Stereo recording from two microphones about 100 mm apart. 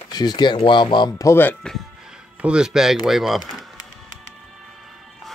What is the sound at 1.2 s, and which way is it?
Speech, 20° left (ahead or behind).